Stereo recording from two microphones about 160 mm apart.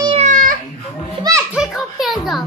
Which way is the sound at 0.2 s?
55° right (ahead or behind).